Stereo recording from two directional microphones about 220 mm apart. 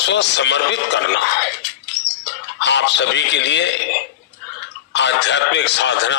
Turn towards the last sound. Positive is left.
turn(degrees=55)  # may be behind; listen again after turning